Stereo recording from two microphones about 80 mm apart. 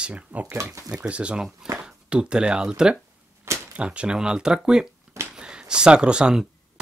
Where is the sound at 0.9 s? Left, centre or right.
Centre.